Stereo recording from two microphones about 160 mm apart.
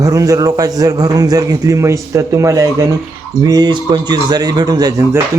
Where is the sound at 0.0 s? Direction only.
20° right (ahead or behind).